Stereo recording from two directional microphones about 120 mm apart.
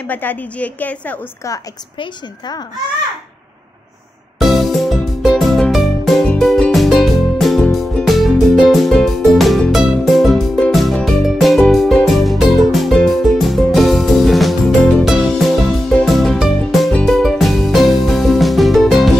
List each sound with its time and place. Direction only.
0.0 s a woman's voice: 15° left (ahead or behind)
2.0 s a woman's voice: 35° left (ahead or behind)
4.4 s music: centre (ahead or behind)